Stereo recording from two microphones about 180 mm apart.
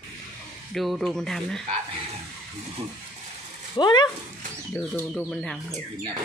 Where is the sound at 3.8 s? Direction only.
25° left (ahead or behind).